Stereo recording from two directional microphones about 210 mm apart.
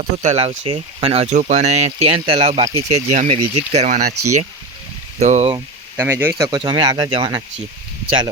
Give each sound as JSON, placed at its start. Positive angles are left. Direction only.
{"t": 0.0, "sound": "speech", "side_deg": -35}
{"t": 5.2, "sound": "speech", "side_deg": -30}
{"t": 5.5, "sound": "speech", "side_deg": -10}